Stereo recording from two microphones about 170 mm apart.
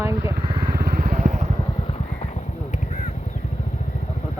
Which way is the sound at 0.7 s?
60° right (ahead or behind).